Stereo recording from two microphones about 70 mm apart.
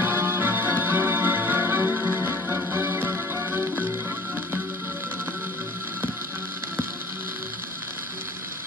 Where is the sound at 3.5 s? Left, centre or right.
Right.